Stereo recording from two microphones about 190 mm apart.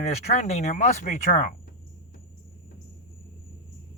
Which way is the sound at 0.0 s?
35° left (ahead or behind).